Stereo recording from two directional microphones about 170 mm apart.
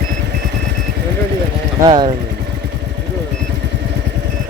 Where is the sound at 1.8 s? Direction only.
25° right (ahead or behind).